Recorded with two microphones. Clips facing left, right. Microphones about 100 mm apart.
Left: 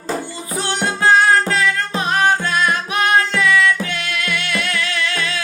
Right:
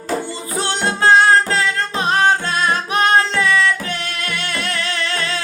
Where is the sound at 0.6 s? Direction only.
30° right (ahead or behind).